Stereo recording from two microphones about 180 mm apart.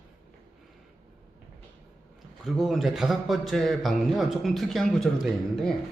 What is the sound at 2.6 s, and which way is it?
Speech, centre (ahead or behind).